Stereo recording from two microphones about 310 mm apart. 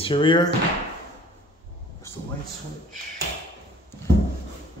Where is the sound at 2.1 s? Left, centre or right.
Centre.